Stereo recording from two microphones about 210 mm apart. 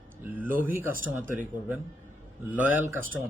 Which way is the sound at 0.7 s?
40° right (ahead or behind).